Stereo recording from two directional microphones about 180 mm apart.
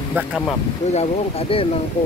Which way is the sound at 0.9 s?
35° left (ahead or behind).